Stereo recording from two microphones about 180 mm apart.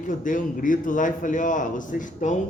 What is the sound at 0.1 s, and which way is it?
A man's voice, 45° left (ahead or behind).